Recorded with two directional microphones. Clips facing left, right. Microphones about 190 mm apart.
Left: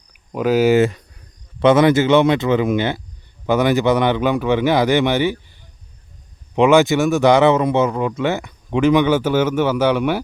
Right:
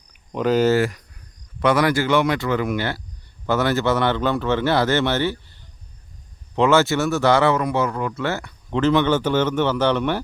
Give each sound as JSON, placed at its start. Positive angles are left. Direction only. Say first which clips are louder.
{"t": 0.1, "sound": "speech", "louder": "left 2 dB", "side_deg": 5}
{"t": 0.8, "sound": "speech", "louder": "left 5 dB", "side_deg": 25}